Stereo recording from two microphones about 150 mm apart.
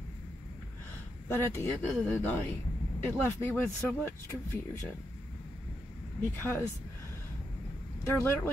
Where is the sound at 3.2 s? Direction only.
15° left (ahead or behind).